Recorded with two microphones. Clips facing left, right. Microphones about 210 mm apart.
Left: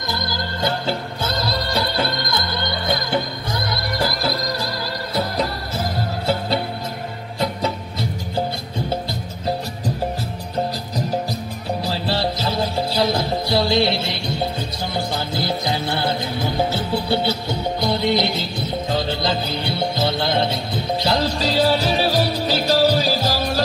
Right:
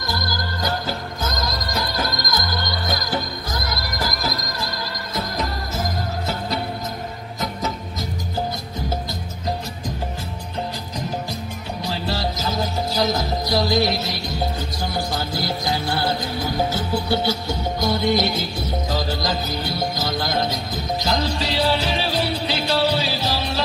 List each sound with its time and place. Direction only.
0.1 s music: 25° left (ahead or behind)
11.8 s music: 30° left (ahead or behind)
17.7 s music: 45° right (ahead or behind)
18.9 s music: 25° left (ahead or behind); by 23.6 s 45° left (ahead or behind)